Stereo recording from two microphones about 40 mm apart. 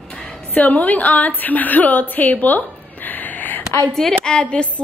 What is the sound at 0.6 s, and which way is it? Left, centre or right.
Speech, left.